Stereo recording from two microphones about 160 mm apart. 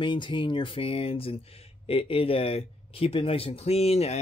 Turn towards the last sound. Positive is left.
turn(degrees=40)  # may be behind; listen again after turning